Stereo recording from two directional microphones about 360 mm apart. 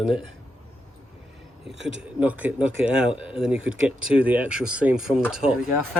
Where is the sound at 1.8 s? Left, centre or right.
Right.